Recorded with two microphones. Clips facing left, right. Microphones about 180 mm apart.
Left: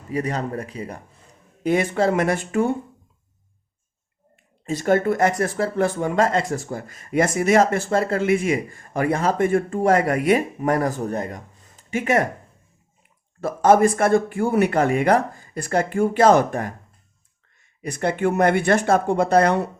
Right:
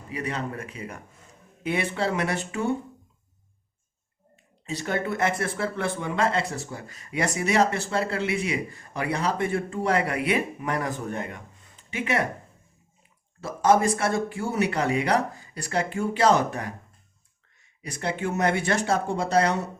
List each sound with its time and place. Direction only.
0.1 s speech: 40° left (ahead or behind)
4.6 s speech: 50° left (ahead or behind)
13.4 s speech: 55° left (ahead or behind)
17.8 s speech: 55° left (ahead or behind)